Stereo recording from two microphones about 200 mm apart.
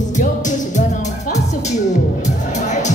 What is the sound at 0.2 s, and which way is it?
Music, 40° left (ahead or behind).